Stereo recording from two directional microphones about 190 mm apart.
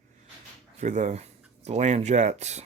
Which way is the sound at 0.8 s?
40° right (ahead or behind).